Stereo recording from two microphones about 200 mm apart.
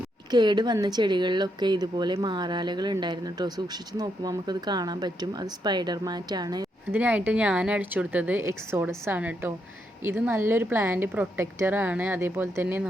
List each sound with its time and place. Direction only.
0.3 s speech: 20° right (ahead or behind)
7.0 s a woman's voice: 5° right (ahead or behind)